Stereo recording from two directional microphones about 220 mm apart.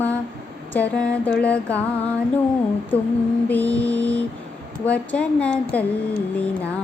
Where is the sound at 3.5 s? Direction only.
5° left (ahead or behind).